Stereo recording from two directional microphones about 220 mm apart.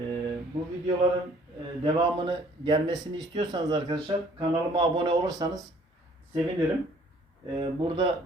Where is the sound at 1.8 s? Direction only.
20° right (ahead or behind).